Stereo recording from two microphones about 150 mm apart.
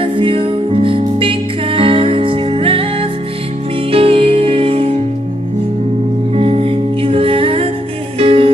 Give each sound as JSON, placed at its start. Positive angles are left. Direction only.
{"t": 0.0, "sound": "music", "side_deg": -35}
{"t": 6.3, "sound": "music", "side_deg": -40}